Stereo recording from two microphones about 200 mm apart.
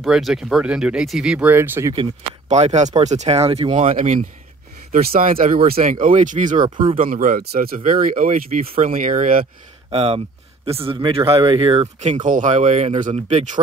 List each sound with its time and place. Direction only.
0.0 s speech: centre (ahead or behind)
2.4 s speech: 35° right (ahead or behind)
6.6 s speech: 25° right (ahead or behind)
7.0 s speech: 45° right (ahead or behind)
9.8 s speech: 30° right (ahead or behind)